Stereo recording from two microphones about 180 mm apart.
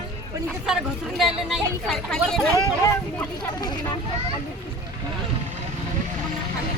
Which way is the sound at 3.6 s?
25° left (ahead or behind).